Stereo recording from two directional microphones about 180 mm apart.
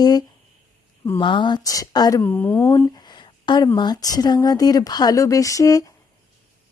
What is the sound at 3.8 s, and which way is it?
Speech, 20° left (ahead or behind).